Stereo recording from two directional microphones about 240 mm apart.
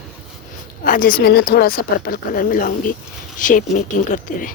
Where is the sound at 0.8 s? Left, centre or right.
Left.